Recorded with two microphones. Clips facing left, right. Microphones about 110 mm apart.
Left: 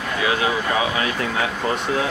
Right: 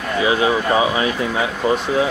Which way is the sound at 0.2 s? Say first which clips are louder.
Right 5 dB; 25° right (ahead or behind).